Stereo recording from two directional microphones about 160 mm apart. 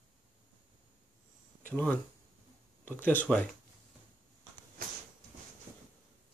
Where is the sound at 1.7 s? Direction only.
10° left (ahead or behind).